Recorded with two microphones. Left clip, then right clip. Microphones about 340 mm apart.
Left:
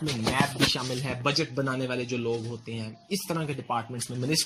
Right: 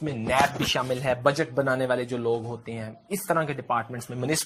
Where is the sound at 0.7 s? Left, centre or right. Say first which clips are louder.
Right 6 dB; centre.